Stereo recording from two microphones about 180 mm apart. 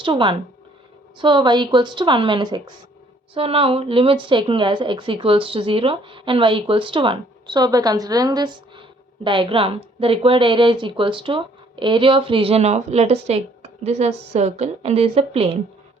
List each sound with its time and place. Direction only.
0.0 s a woman's voice: 25° right (ahead or behind)